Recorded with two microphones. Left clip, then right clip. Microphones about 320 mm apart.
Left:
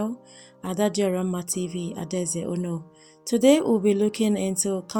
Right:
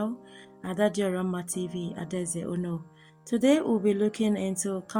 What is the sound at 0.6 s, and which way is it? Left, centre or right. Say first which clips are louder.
Speech: left 3 dB; right.